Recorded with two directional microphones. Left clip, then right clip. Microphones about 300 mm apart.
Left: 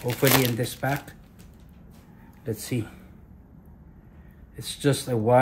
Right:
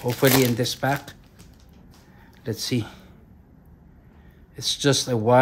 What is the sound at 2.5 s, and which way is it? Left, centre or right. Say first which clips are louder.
Speech: right 4 dB; centre.